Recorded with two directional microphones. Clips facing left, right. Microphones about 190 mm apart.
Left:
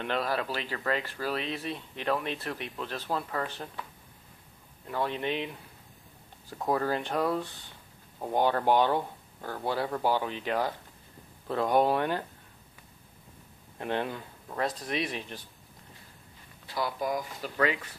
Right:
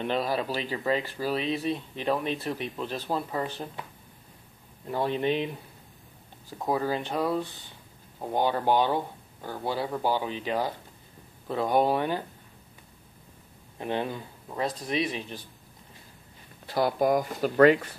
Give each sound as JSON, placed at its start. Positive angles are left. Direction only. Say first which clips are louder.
{"t": 0.0, "sound": "speech", "louder": "right 3 dB", "side_deg": -10}
{"t": 4.9, "sound": "speech", "louder": "right 4 dB", "side_deg": -35}
{"t": 6.6, "sound": "speech", "louder": "right 1 dB", "side_deg": -10}
{"t": 13.7, "sound": "speech", "louder": "right 1 dB", "side_deg": -10}
{"t": 14.9, "sound": "speech", "louder": "right 3 dB", "side_deg": -30}
{"t": 16.6, "sound": "speech", "louder": "right 7 dB", "side_deg": -50}